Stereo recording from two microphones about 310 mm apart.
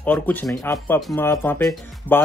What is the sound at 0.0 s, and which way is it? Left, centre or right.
Speech, centre.